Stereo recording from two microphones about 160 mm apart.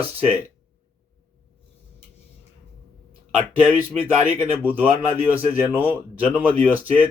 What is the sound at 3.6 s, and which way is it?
Speech, 10° right (ahead or behind).